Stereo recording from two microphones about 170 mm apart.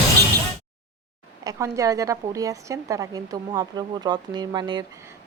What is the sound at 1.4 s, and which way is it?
A woman's voice, 20° right (ahead or behind).